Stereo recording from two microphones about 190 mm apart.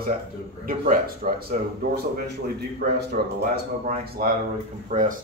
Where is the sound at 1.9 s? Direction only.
60° right (ahead or behind).